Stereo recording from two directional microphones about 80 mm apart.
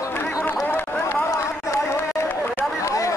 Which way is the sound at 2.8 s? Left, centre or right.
Left.